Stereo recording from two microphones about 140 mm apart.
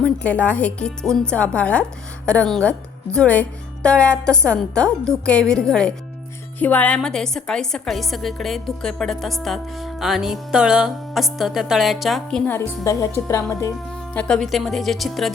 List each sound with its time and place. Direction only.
0.0 s a woman's voice: 10° left (ahead or behind)
12.5 s speech: 20° left (ahead or behind)
14.1 s a woman's voice: 5° left (ahead or behind)